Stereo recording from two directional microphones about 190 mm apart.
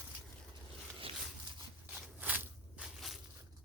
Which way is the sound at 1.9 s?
5° right (ahead or behind).